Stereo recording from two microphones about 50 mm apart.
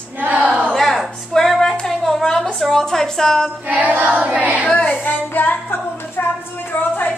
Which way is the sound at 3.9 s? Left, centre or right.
Right.